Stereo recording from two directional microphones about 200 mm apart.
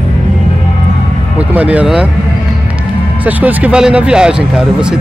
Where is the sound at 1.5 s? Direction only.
5° right (ahead or behind).